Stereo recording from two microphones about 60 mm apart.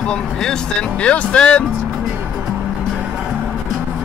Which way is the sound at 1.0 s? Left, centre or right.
Centre.